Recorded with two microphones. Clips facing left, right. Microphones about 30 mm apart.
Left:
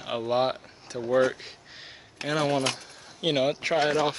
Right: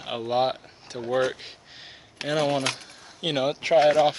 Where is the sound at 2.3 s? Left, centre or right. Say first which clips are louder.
Right 1 dB; centre.